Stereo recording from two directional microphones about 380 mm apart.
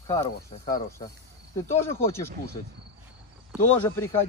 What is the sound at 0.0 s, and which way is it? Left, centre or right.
Speech, centre.